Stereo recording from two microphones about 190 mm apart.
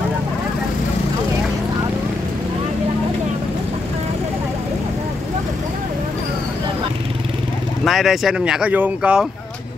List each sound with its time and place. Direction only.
7.8 s speech: centre (ahead or behind)